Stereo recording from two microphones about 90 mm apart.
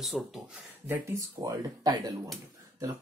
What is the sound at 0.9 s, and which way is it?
Speech, 35° right (ahead or behind).